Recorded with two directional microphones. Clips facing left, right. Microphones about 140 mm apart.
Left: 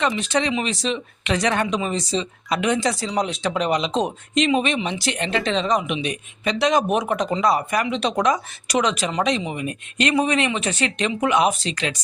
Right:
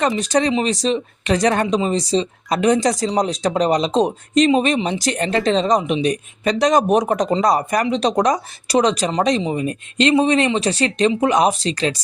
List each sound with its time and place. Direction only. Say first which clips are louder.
0.1 s speech: right 4 dB; 40° right (ahead or behind)